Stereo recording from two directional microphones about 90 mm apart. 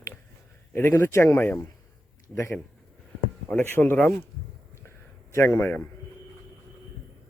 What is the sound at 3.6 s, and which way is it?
Speech, 25° left (ahead or behind).